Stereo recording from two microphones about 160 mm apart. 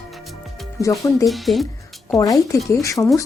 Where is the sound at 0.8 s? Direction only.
20° left (ahead or behind).